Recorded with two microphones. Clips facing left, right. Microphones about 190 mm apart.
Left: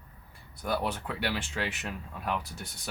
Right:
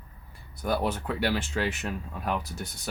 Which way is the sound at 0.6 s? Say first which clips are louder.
Right 4 dB; 40° right (ahead or behind).